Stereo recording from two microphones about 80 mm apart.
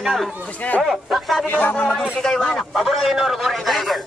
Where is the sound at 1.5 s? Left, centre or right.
Left.